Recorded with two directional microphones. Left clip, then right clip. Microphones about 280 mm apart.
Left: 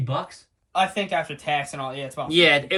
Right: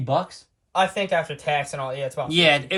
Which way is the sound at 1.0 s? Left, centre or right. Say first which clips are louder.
Right 2 dB; right.